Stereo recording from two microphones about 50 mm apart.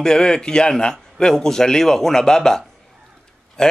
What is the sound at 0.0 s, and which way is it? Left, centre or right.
A man's voice, centre.